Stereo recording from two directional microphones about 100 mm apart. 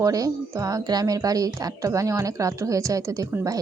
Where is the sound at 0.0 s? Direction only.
35° right (ahead or behind).